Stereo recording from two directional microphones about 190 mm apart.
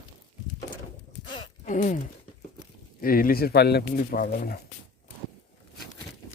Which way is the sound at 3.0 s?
50° left (ahead or behind).